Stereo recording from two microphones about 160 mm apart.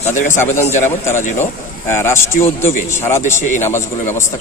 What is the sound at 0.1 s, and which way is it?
Speech, 50° left (ahead or behind).